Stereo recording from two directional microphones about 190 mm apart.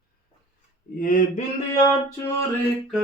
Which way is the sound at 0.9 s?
45° left (ahead or behind).